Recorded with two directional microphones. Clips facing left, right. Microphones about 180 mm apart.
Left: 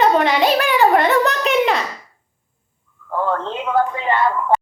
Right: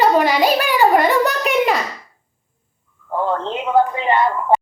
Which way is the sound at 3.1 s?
20° right (ahead or behind).